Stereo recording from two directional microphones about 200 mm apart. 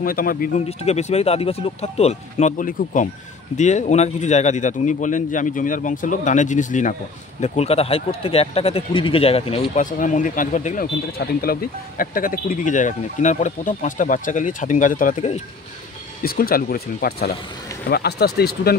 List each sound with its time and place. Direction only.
0.0 s speech: 45° left (ahead or behind)
0.7 s speech: 30° left (ahead or behind)
9.8 s speech: 40° left (ahead or behind)